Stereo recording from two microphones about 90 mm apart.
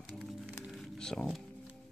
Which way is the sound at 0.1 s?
Centre (ahead or behind).